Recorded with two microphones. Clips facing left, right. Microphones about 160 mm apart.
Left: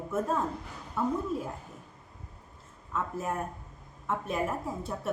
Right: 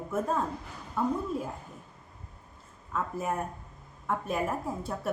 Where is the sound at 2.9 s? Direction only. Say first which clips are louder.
Right 1 dB; centre (ahead or behind).